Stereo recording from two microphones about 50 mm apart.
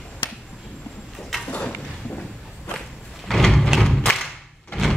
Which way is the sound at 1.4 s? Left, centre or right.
Left.